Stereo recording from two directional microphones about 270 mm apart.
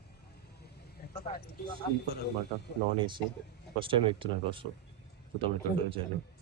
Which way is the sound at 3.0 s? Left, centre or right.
Centre.